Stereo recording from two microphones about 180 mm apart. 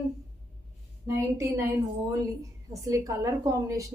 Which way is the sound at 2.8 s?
20° right (ahead or behind).